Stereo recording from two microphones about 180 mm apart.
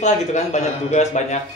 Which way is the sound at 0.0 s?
40° left (ahead or behind).